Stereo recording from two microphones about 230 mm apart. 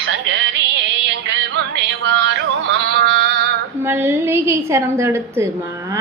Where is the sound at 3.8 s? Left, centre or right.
Centre.